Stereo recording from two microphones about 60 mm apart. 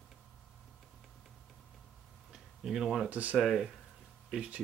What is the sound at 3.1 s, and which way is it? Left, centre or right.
Speech, right.